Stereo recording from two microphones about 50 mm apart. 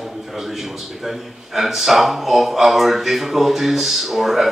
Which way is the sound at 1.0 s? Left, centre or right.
Centre.